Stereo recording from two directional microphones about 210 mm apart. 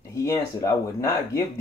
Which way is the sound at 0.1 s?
15° left (ahead or behind).